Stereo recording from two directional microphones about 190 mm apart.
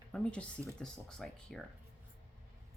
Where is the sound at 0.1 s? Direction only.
5° left (ahead or behind).